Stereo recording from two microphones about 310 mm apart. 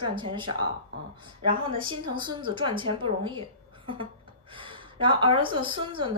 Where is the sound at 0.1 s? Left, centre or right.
Centre.